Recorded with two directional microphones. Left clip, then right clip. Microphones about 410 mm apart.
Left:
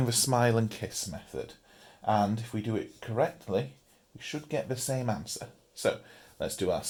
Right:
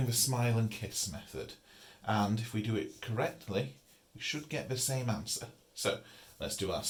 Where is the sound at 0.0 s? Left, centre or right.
Centre.